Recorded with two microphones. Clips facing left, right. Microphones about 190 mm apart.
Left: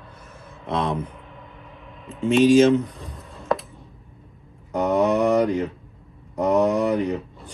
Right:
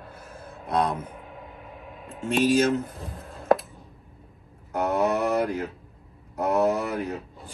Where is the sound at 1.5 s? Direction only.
50° right (ahead or behind).